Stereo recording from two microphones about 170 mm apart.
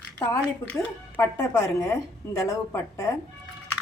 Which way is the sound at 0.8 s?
15° left (ahead or behind).